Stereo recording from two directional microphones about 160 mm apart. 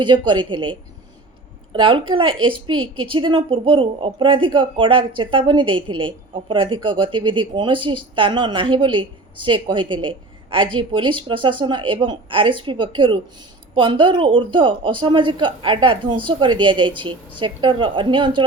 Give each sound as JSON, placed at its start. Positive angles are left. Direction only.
{"t": 0.0, "sound": "a woman's voice", "side_deg": -30}